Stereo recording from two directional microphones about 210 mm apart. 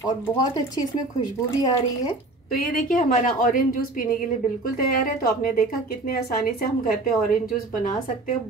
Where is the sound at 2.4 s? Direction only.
45° left (ahead or behind).